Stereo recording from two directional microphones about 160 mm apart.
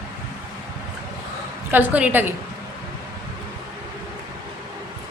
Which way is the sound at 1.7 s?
10° right (ahead or behind).